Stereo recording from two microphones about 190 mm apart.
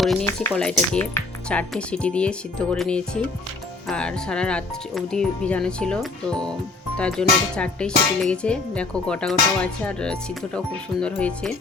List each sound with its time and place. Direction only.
0.0 s speech: centre (ahead or behind)